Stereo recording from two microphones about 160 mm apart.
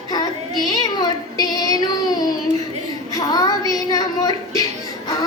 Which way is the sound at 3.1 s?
20° left (ahead or behind).